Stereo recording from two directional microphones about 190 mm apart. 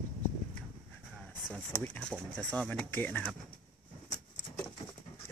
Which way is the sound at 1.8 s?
5° left (ahead or behind).